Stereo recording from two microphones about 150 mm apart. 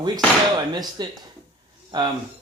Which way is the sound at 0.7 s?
30° right (ahead or behind).